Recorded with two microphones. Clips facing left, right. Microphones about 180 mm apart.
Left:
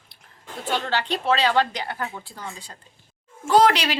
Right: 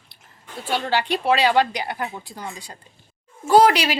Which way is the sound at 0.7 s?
10° right (ahead or behind).